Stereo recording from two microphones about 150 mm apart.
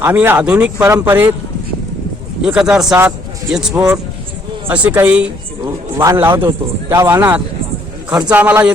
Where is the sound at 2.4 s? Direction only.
5° right (ahead or behind).